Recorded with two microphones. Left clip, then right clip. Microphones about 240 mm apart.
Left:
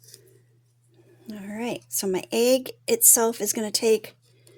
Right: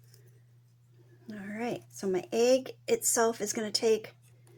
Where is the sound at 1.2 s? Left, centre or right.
Left.